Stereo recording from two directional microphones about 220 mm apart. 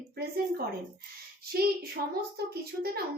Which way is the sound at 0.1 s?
45° right (ahead or behind).